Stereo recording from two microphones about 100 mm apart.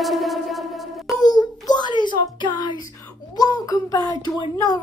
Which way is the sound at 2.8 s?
35° left (ahead or behind).